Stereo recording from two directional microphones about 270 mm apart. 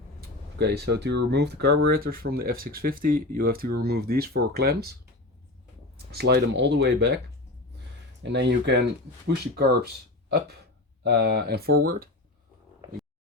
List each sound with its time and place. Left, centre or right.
0.2 s a sound: right
1.3 s speech: right
6.1 s speech: right
8.2 s speech: right